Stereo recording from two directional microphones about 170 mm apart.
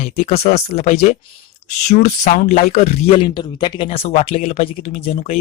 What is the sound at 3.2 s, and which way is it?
Speech, 25° left (ahead or behind).